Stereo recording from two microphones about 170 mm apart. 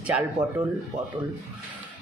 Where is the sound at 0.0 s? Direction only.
10° right (ahead or behind).